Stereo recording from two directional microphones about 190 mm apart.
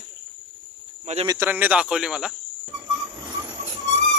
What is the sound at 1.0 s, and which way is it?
Speech, 35° right (ahead or behind).